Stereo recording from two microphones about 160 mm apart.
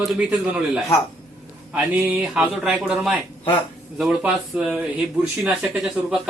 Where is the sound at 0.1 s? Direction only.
5° right (ahead or behind).